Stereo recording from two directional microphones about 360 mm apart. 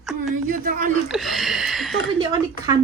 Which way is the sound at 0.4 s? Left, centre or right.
Right.